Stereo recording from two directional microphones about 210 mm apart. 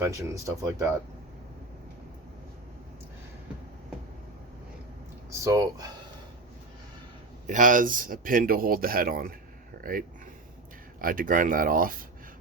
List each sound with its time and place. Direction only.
0.0 s speech: 15° right (ahead or behind)
5.4 s speech: 15° right (ahead or behind)
7.4 s speech: 35° right (ahead or behind)
11.0 s speech: 40° right (ahead or behind)